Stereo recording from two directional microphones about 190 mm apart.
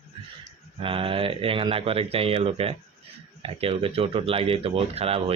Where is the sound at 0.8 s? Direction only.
30° right (ahead or behind).